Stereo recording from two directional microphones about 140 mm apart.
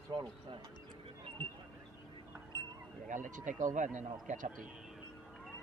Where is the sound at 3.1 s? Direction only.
65° right (ahead or behind).